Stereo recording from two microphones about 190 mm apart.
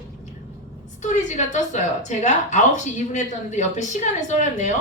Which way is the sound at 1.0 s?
40° left (ahead or behind).